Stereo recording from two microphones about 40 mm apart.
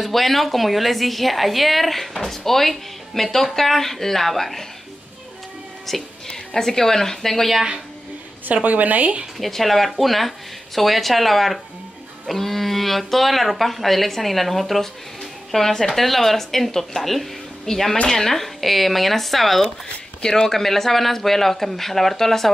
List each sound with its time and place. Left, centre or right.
0.0 s a woman's voice: centre
5.9 s a woman's voice: centre
8.6 s speech: right
9.4 s a woman's voice: centre
20.2 s a woman's voice: centre